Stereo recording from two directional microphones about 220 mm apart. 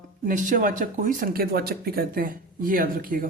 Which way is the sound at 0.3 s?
35° right (ahead or behind).